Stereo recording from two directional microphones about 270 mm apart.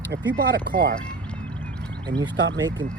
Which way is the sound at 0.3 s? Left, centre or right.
Right.